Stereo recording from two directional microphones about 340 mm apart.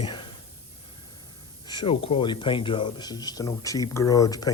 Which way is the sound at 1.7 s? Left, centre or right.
Centre.